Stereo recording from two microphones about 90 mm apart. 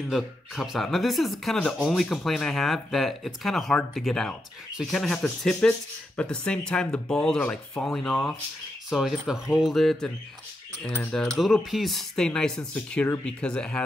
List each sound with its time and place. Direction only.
0.1 s speech: centre (ahead or behind)
1.6 s speech: 10° left (ahead or behind)
10.9 s speech: 20° left (ahead or behind)
11.1 s speech: 5° left (ahead or behind)